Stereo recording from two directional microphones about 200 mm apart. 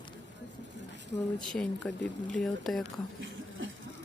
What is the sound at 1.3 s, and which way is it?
Speech, 5° left (ahead or behind).